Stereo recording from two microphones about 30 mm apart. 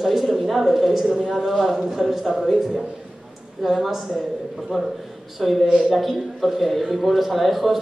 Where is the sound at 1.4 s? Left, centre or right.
Centre.